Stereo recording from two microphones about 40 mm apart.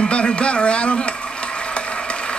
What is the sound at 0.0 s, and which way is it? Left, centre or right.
Speech, left.